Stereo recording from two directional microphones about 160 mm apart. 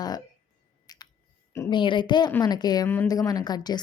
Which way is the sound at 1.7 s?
30° left (ahead or behind).